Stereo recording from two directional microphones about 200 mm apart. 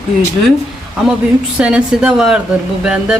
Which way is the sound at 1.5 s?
5° right (ahead or behind).